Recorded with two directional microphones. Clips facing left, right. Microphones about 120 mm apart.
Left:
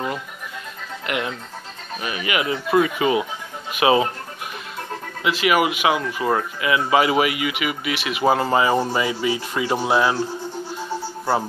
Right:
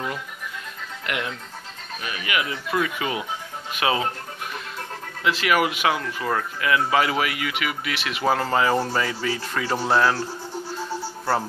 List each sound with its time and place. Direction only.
1.0 s speech: 10° left (ahead or behind)
5.2 s speech: 5° left (ahead or behind)